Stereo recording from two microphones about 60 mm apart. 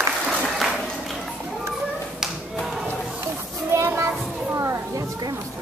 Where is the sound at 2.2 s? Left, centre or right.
Centre.